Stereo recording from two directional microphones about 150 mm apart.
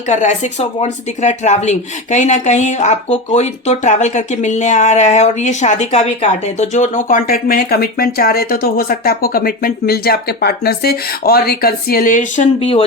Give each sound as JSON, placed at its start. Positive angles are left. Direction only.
{"t": 0.1, "sound": "speech", "side_deg": 55}
{"t": 12.5, "sound": "speech", "side_deg": 40}